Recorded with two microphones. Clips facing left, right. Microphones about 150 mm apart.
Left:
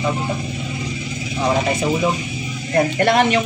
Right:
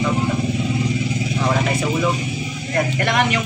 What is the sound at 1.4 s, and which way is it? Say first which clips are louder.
Speech: left 3 dB; 20° left (ahead or behind).